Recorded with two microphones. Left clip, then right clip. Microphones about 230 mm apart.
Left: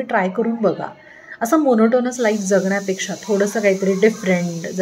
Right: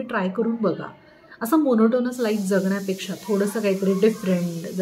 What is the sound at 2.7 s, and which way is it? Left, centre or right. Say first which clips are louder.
A woman's voice: left 6 dB; centre.